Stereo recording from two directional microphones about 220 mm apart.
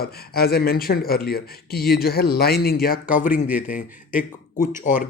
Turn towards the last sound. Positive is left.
turn(degrees=35)  # may be behind; listen again after turning